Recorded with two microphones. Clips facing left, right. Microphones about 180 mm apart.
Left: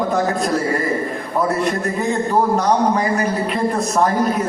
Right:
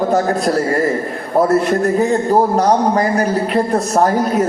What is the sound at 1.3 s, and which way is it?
A man's voice, 40° right (ahead or behind).